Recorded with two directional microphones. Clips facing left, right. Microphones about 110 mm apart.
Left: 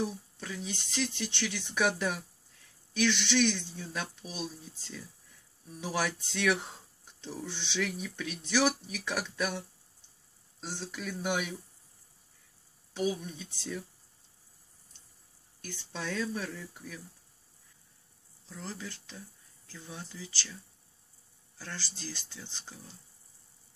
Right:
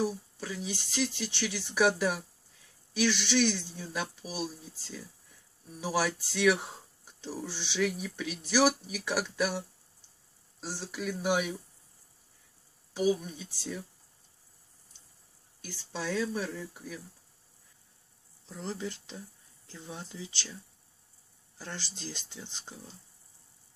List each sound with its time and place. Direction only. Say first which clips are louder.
0.0 s speech: right 3 dB; 5° right (ahead or behind)
10.6 s speech: right 2 dB; 5° right (ahead or behind)
12.9 s speech: right 4 dB; 5° right (ahead or behind)
15.6 s speech: right 2 dB; 5° right (ahead or behind)
18.5 s speech: right 5 dB; 25° right (ahead or behind)
21.5 s speech: right 1 dB; 20° right (ahead or behind)